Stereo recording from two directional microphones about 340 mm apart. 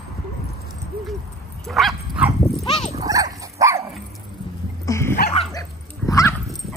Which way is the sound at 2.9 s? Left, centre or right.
Centre.